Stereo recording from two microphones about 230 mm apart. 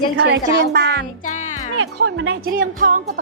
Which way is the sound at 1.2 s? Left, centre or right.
Left.